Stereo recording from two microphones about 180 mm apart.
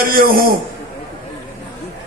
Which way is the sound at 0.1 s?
55° right (ahead or behind).